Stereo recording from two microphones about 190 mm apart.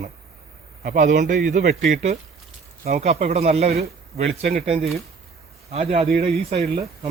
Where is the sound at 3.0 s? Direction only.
35° right (ahead or behind).